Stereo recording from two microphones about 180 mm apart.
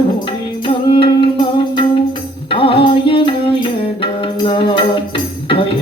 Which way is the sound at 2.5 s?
30° left (ahead or behind).